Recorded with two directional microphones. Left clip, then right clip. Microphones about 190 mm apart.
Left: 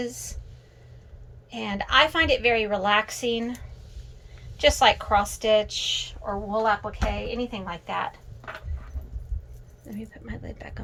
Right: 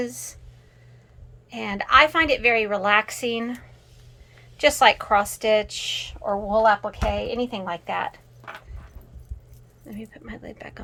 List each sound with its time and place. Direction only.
0.0 s a woman's voice: 15° right (ahead or behind)
1.5 s a woman's voice: 15° right (ahead or behind)
9.8 s a woman's voice: 15° right (ahead or behind)